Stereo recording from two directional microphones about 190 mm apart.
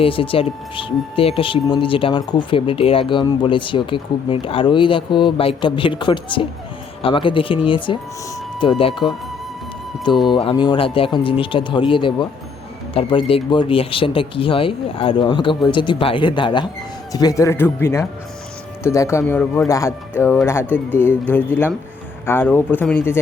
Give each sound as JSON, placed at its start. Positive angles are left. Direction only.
{"t": 0.0, "sound": "speech", "side_deg": 30}
{"t": 10.2, "sound": "speech", "side_deg": 25}